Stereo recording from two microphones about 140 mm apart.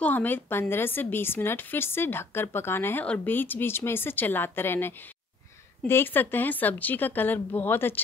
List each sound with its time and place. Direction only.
0.0 s a woman's voice: 10° left (ahead or behind)